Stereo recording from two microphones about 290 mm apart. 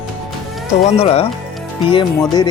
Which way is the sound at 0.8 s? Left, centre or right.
Centre.